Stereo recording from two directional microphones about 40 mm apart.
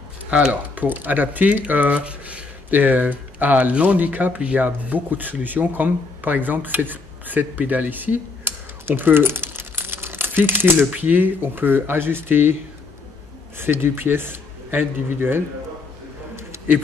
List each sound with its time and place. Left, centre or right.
0.5 s speech: right
2.7 s speech: right
8.8 s crumpling: right
11.0 s speech: right
13.6 s a man's voice: right